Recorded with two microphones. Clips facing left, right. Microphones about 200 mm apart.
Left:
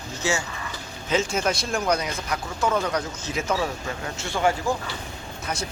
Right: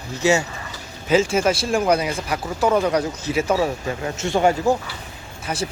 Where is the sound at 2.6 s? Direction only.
35° right (ahead or behind).